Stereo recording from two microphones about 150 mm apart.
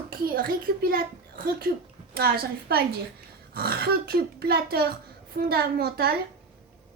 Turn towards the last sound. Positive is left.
turn(degrees=-90)